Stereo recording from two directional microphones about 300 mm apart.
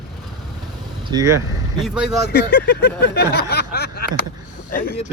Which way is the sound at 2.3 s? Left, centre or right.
Left.